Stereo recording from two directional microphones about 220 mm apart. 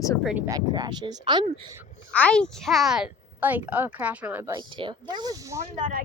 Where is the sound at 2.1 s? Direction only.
5° left (ahead or behind); by 5.6 s 15° right (ahead or behind).